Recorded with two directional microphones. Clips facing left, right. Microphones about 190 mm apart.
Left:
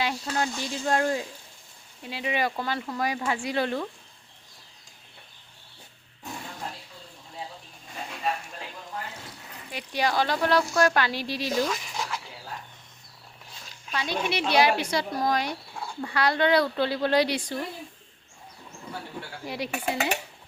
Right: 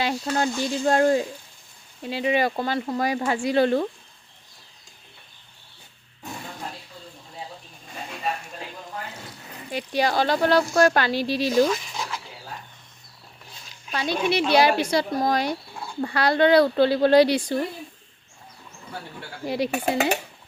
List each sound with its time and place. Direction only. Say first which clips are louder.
0.0 s speech: right 4 dB; 30° right (ahead or behind)
9.7 s speech: right 3 dB; 30° right (ahead or behind)
13.9 s speech: right 5 dB; 35° right (ahead or behind)
19.5 s speech: right 7 dB; 30° right (ahead or behind)